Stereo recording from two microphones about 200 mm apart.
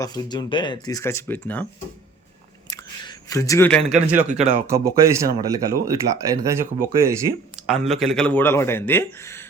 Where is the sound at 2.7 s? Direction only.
15° left (ahead or behind).